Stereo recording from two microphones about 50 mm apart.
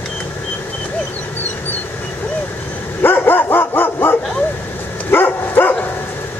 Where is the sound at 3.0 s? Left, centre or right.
Left.